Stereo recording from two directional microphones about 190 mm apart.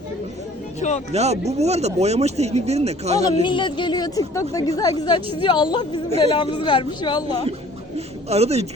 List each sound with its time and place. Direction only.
0.8 s speech: 35° left (ahead or behind)
1.1 s speech: 35° right (ahead or behind)
3.4 s speech: 25° left (ahead or behind)
7.9 s a sound: 35° right (ahead or behind)